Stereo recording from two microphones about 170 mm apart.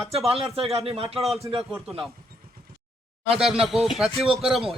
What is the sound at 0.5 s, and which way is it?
Speech, 35° right (ahead or behind).